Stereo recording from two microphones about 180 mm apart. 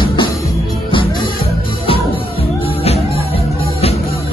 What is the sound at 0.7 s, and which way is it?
Music, 25° left (ahead or behind).